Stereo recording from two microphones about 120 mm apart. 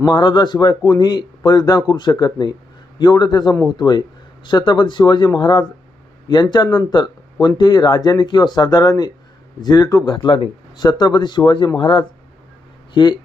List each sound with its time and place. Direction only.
0.0 s speech: 40° left (ahead or behind)
10.8 s speech: 35° left (ahead or behind)